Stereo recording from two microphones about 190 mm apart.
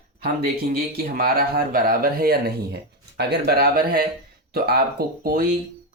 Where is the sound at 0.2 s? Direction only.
50° right (ahead or behind).